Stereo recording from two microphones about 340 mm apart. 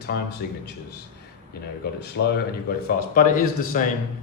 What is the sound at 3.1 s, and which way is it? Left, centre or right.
Speech, left.